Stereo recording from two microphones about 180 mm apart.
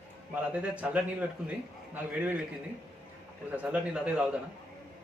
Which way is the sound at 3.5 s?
5° right (ahead or behind).